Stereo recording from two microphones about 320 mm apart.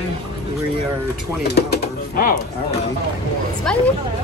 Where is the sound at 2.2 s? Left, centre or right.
Left.